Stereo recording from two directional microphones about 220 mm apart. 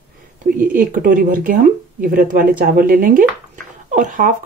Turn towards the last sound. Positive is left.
turn(degrees=-40)  # may be behind; listen again after turning